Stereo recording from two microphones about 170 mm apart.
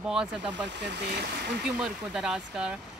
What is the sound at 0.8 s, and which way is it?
Speech, 80° right.